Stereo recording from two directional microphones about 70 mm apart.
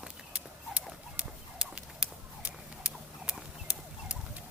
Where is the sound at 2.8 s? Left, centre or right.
Centre.